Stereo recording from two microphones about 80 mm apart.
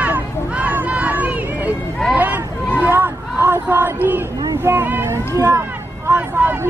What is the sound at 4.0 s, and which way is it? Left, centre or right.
Speech, right.